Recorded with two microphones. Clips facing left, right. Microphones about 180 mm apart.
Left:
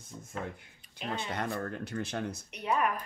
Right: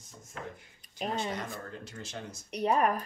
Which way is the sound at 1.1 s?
60° left (ahead or behind).